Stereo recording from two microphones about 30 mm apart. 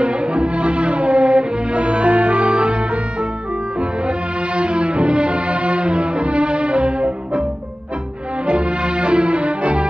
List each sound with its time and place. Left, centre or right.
0.0 s music: right
4.6 s music: right
8.5 s music: right